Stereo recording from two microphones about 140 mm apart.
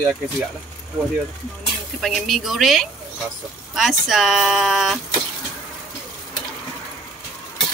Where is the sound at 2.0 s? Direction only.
Centre (ahead or behind).